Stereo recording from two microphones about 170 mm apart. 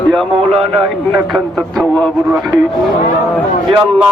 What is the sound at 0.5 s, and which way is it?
Speech, 35° right (ahead or behind).